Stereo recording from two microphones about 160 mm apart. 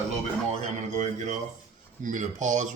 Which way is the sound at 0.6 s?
45° right (ahead or behind).